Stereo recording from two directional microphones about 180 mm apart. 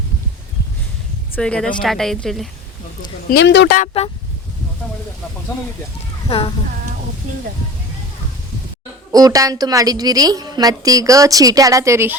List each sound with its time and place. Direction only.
1.4 s speech: 5° left (ahead or behind)
3.2 s speech: 70° left (ahead or behind)
3.8 s speech: 35° left (ahead or behind)
6.2 s speech: 30° left (ahead or behind)
9.1 s a woman's voice: 20° right (ahead or behind)